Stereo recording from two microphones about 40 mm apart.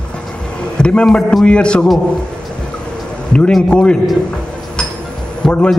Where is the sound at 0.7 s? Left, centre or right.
Left.